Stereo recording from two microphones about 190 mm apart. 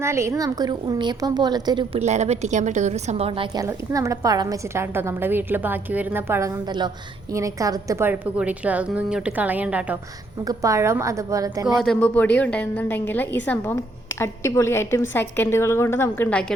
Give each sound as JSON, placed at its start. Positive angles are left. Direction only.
{"t": 0.0, "sound": "a woman's voice", "side_deg": -15}
{"t": 3.6, "sound": "a woman's voice", "side_deg": -15}
{"t": 10.4, "sound": "a woman's voice", "side_deg": -15}
{"t": 11.8, "sound": "a woman's voice", "side_deg": 5}